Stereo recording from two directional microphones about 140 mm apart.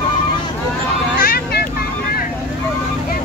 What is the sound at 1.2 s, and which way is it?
Vehicle, 90° left.